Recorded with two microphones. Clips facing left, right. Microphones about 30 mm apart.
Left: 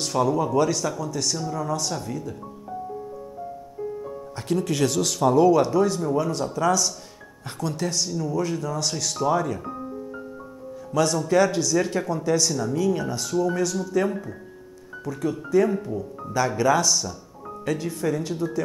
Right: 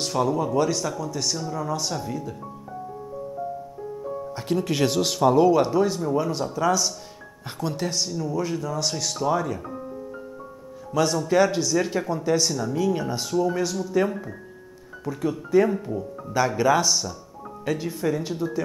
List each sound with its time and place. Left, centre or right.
0.0 s speech: centre
4.4 s speech: centre
10.9 s speech: centre
16.0 s speech: centre